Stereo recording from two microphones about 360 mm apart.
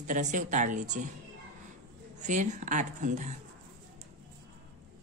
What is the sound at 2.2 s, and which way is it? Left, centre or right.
Speech, centre.